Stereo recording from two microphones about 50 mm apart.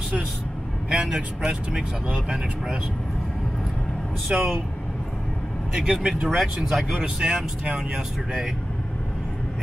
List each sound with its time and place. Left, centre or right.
0.8 s speech: centre
4.3 s speech: centre
5.8 s speech: centre
6.2 s speech: centre
7.0 s speech: centre